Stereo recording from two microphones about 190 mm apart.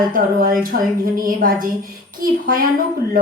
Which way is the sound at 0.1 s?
50° right (ahead or behind).